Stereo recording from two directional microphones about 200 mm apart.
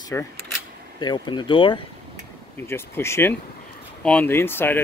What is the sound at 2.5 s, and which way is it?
Speech, 10° left (ahead or behind).